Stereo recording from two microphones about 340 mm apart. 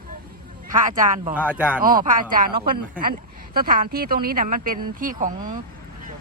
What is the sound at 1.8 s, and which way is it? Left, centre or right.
Speech, right.